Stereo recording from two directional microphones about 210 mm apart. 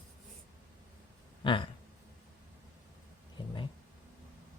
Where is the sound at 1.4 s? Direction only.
25° left (ahead or behind).